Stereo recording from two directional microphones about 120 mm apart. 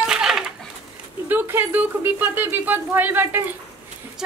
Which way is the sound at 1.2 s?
20° right (ahead or behind).